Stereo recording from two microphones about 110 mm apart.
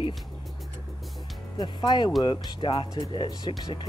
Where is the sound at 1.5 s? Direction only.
40° left (ahead or behind).